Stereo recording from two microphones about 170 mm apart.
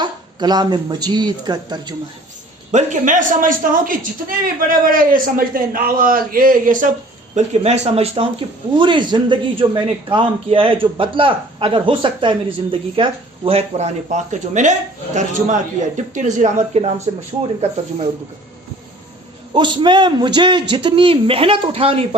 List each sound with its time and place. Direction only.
0.0 s a man's voice: 25° right (ahead or behind)
2.7 s a man's voice: 45° right (ahead or behind)
7.3 s a man's voice: 40° right (ahead or behind)
19.5 s a man's voice: 30° right (ahead or behind)